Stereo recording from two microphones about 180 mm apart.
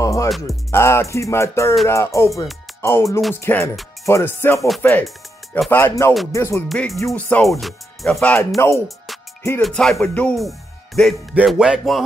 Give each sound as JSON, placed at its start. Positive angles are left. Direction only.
{"t": 0.0, "sound": "music", "side_deg": 15}
{"t": 5.7, "sound": "music", "side_deg": 15}
{"t": 6.7, "sound": "music", "side_deg": 0}
{"t": 8.8, "sound": "music", "side_deg": 0}